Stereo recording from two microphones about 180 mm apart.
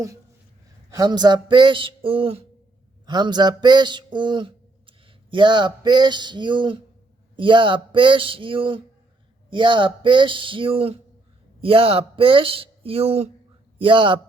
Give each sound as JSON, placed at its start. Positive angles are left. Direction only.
{"t": 0.9, "sound": "speech", "side_deg": -25}
{"t": 3.1, "sound": "a sound", "side_deg": -25}
{"t": 7.3, "sound": "a man's voice", "side_deg": -25}